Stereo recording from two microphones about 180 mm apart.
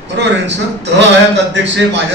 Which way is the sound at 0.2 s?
75° right (ahead or behind).